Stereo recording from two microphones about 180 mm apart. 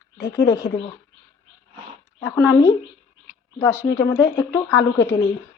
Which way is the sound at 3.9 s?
15° left (ahead or behind).